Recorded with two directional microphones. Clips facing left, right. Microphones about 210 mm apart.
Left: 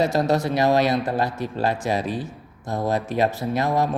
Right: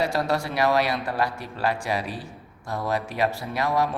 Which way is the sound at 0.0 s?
20° left (ahead or behind).